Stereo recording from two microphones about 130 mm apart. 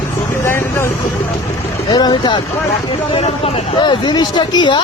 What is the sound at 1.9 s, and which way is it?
Vehicle, 30° left (ahead or behind).